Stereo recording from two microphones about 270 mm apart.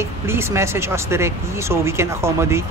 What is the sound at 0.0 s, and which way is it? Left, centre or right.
Speech, centre.